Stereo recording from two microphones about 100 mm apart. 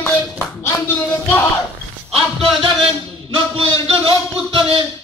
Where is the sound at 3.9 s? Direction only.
70° right (ahead or behind).